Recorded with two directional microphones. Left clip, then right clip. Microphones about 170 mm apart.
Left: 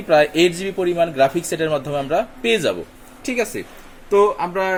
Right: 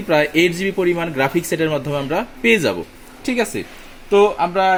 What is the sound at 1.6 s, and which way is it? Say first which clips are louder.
A man's voice: right 1 dB; 25° right (ahead or behind).